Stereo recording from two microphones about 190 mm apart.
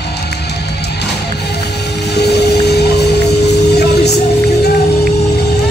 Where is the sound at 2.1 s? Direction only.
60° left (ahead or behind).